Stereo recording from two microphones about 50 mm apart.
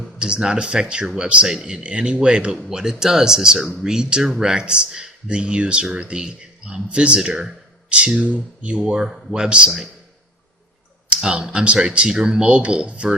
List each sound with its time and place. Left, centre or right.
0.0 s a man's voice: centre
9.0 s speech: centre
9.3 s a man's voice: centre
11.2 s speech: centre